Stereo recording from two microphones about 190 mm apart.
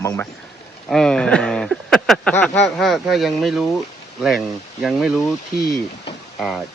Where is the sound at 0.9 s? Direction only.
5° left (ahead or behind).